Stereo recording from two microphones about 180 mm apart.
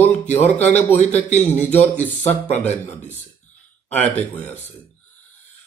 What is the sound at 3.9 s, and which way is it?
Speech, 10° left (ahead or behind).